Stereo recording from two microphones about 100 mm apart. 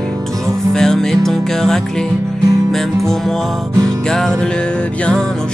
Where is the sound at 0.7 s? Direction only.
5° left (ahead or behind).